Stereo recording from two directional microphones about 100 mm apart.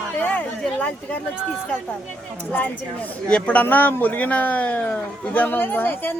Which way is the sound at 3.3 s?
10° left (ahead or behind).